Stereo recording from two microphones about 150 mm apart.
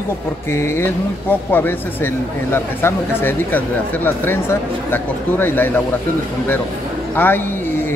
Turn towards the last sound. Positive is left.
turn(degrees=15)  # may be behind; listen again after turning